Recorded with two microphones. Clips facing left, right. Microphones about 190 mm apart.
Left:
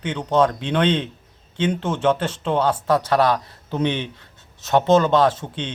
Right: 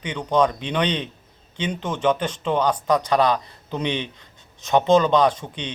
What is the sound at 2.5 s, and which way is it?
Speech, 5° left (ahead or behind).